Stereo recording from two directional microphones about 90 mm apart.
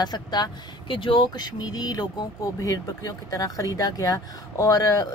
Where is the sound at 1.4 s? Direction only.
50° left (ahead or behind).